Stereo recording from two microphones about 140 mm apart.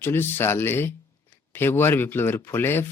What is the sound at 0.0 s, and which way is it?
Speech, 15° left (ahead or behind).